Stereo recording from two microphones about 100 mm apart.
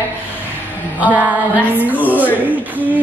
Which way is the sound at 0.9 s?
15° right (ahead or behind).